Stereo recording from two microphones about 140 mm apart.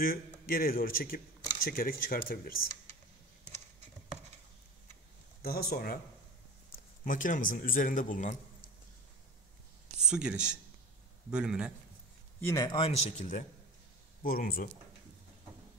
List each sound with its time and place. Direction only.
0.0 s speech: 90° left
5.4 s speech: 90° left
7.1 s a man's voice: 70° left (ahead or behind)
9.9 s a man's voice: 5° right (ahead or behind)
12.4 s a man's voice: 20° left (ahead or behind)
12.6 s a man's voice: 40° left (ahead or behind)
13.2 s a man's voice: 60° left (ahead or behind)
14.2 s speech: 90° left